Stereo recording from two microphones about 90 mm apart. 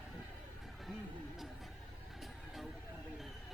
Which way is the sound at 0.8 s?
Centre (ahead or behind).